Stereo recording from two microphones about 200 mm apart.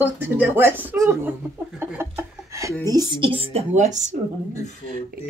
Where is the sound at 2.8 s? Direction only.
20° right (ahead or behind); by 4.1 s 35° right (ahead or behind).